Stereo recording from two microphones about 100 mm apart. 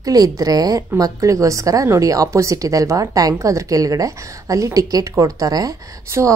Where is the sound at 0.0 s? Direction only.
35° right (ahead or behind).